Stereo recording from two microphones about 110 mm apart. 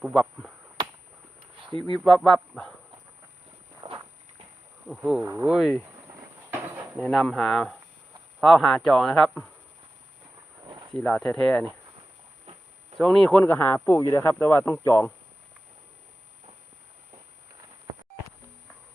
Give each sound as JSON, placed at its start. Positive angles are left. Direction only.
{"t": 0.0, "sound": "speech", "side_deg": 0}
{"t": 2.0, "sound": "speech", "side_deg": 5}
{"t": 3.8, "sound": "walk", "side_deg": -45}
{"t": 4.9, "sound": "speech", "side_deg": -5}
{"t": 5.2, "sound": "speech", "side_deg": -25}
{"t": 5.5, "sound": "speech", "side_deg": 0}
{"t": 6.1, "sound": "a sound", "side_deg": -25}
{"t": 7.0, "sound": "speech", "side_deg": 0}
{"t": 10.9, "sound": "speech", "side_deg": 10}
{"t": 13.0, "sound": "speech", "side_deg": 5}
{"t": 13.4, "sound": "speech", "side_deg": 20}